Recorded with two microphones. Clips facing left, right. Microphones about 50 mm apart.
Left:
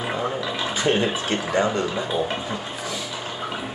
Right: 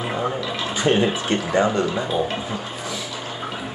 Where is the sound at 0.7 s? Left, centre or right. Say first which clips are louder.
Right 3 dB; right.